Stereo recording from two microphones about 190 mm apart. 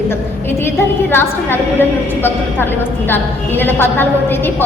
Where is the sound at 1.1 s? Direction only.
10° left (ahead or behind).